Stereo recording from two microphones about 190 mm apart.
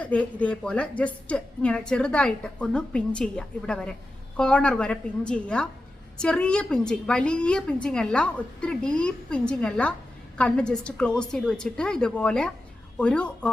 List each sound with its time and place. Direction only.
0.0 s a woman's voice: 5° left (ahead or behind)